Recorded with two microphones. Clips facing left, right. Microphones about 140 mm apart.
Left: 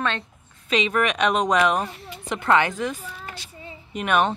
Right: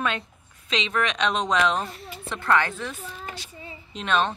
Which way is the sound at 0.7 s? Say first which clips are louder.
Left 4 dB; 10° left (ahead or behind).